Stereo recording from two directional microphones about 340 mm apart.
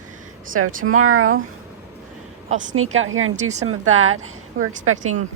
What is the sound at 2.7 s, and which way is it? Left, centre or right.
Speech, right.